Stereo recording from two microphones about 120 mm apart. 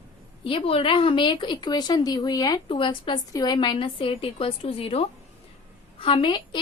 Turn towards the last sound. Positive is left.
turn(degrees=40)  # may be behind; listen again after turning